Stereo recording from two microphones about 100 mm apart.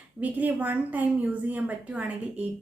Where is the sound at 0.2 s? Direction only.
15° right (ahead or behind).